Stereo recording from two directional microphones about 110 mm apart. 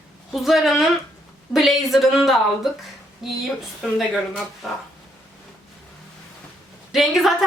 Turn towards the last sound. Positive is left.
turn(degrees=0)  # may be behind; listen again after turning